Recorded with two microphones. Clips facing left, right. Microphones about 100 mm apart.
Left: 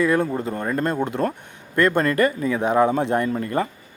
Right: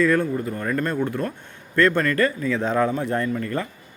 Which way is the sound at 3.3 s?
30° left (ahead or behind).